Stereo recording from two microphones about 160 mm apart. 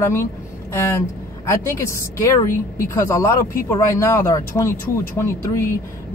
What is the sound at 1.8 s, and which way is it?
Speech, 20° left (ahead or behind).